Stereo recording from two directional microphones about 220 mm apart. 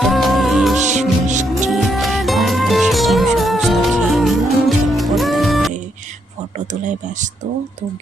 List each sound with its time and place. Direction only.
0.0 s music: centre (ahead or behind)
0.8 s music: 35° right (ahead or behind)
1.5 s music: centre (ahead or behind)